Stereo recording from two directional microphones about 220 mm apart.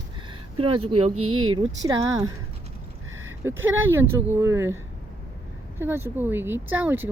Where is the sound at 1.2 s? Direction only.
75° right (ahead or behind).